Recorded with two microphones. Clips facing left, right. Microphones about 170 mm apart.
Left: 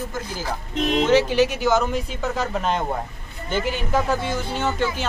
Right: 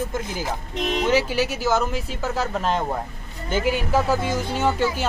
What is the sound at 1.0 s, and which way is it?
Speech, 10° right (ahead or behind).